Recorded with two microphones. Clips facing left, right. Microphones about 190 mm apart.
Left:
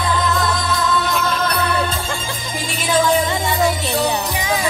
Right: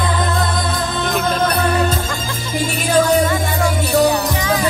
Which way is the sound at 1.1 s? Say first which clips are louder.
Right 3 dB; 50° right (ahead or behind).